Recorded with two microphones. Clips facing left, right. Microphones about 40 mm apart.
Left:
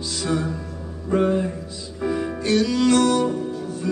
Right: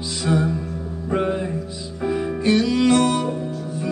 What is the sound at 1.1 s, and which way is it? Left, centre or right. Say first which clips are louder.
Music: left 2 dB; centre.